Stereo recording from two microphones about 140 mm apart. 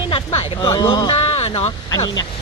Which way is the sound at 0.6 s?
25° left (ahead or behind).